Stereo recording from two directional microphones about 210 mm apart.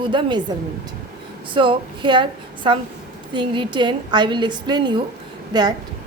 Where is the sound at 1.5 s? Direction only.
25° right (ahead or behind).